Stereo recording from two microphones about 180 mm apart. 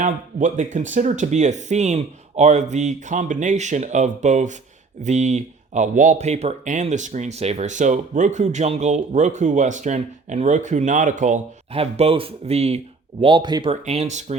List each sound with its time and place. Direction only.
0.0 s speech: 45° right (ahead or behind)
13.2 s speech: 25° right (ahead or behind)